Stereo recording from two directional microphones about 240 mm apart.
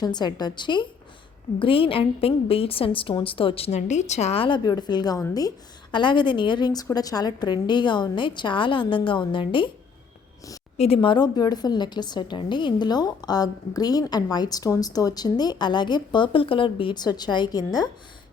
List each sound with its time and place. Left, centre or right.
0.0 s a woman's voice: centre
10.8 s a woman's voice: left